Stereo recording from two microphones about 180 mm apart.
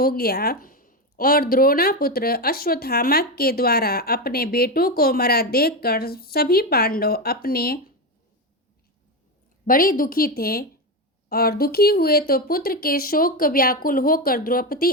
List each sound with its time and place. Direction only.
0.0 s speech: 55° left (ahead or behind)
9.6 s a woman's voice: 50° left (ahead or behind)